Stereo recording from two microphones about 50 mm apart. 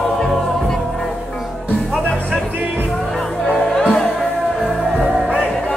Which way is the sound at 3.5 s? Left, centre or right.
Centre.